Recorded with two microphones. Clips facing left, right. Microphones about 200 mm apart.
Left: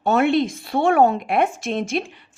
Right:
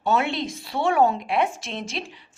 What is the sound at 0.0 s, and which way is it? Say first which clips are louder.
Speech: left 6 dB; 55° left (ahead or behind).